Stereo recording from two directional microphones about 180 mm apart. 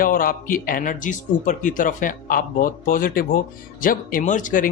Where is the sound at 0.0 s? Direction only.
50° left (ahead or behind).